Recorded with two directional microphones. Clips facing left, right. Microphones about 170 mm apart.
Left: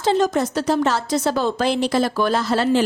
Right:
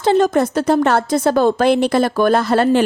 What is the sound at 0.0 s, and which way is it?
A woman's voice, 55° right (ahead or behind).